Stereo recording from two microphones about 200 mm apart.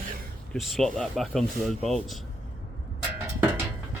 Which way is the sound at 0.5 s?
Centre (ahead or behind).